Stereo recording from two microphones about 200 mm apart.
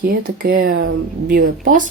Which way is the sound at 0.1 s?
45° right (ahead or behind).